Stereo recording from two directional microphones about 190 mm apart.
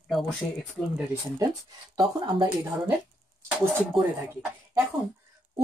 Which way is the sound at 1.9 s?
20° right (ahead or behind).